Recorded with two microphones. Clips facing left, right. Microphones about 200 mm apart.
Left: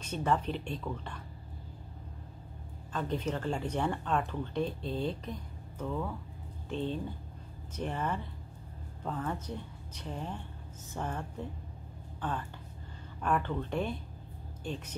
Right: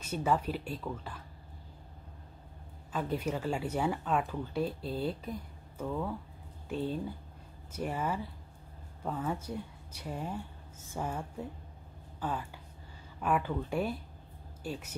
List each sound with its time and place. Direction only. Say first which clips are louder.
0.0 s speech: even; 5° right (ahead or behind)
2.9 s speech: even; 10° right (ahead or behind)